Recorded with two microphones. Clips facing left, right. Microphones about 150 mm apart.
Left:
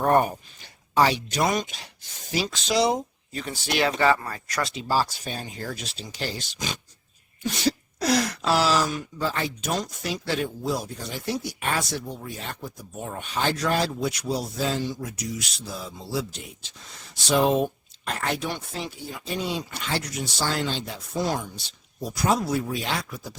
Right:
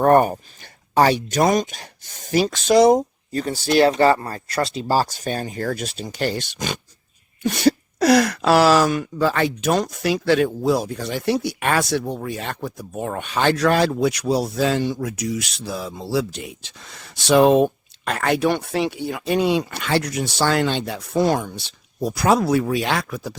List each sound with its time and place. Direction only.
0.0 s speech: 55° right (ahead or behind); by 23.3 s 70° right (ahead or behind)